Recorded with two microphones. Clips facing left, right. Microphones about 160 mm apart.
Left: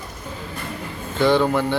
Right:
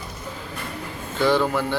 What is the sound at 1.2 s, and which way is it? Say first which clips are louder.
Speech: left 3 dB; 5° right (ahead or behind).